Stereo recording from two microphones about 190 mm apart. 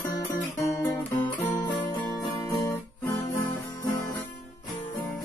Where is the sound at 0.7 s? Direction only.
10° left (ahead or behind).